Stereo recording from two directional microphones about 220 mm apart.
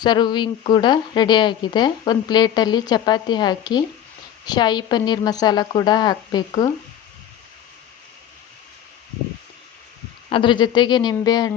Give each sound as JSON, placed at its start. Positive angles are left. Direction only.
{"t": 0.0, "sound": "speech", "side_deg": 20}
{"t": 10.2, "sound": "speech", "side_deg": 20}